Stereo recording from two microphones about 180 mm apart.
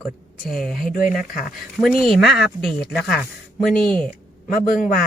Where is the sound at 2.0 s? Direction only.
Centre (ahead or behind).